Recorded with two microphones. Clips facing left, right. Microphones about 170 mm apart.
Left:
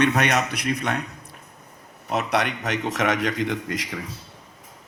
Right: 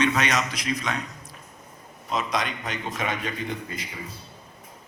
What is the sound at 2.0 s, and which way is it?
A man's voice, 70° left (ahead or behind).